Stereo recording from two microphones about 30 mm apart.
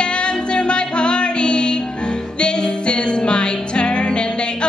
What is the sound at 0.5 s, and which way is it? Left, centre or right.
Music, left.